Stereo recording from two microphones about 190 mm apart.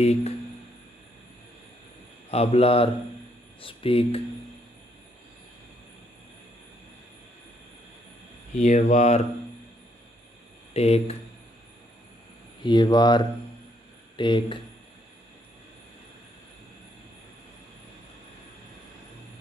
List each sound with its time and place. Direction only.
0.0 s speech: 35° left (ahead or behind)
2.3 s speech: 30° left (ahead or behind)
8.5 s speech: 35° left (ahead or behind)
10.7 s speech: 35° left (ahead or behind)
12.6 s speech: 20° left (ahead or behind)